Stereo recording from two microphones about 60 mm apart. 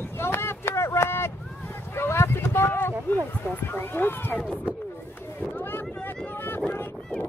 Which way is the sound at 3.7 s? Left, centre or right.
Left.